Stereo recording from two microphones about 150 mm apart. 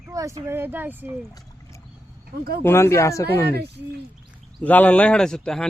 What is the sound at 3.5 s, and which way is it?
Speech, 90° right.